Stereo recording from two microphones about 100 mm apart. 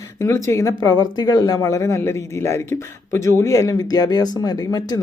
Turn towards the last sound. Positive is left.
turn(degrees=40)  # may be behind; listen again after turning